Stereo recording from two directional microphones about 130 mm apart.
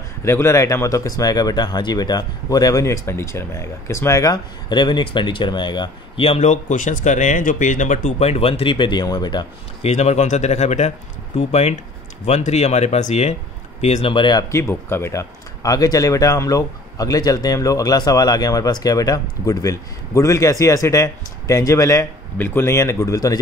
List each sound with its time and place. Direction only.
0.2 s speech: 20° left (ahead or behind)
9.8 s speech: 60° left (ahead or behind)
14.1 s speech: 35° left (ahead or behind)
14.5 s speech: 20° left (ahead or behind)